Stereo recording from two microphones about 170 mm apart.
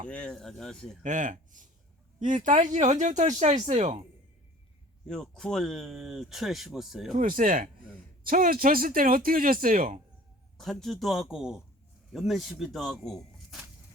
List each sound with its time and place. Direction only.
0.1 s speech: 5° left (ahead or behind)
1.0 s speech: 50° right (ahead or behind)
5.0 s speech: 5° left (ahead or behind)
7.1 s speech: 50° right (ahead or behind)
10.6 s speech: centre (ahead or behind)